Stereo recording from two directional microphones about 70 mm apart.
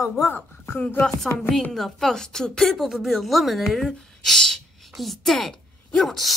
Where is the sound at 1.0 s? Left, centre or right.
Centre.